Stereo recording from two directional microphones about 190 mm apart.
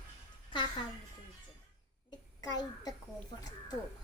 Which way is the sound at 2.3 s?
20° left (ahead or behind).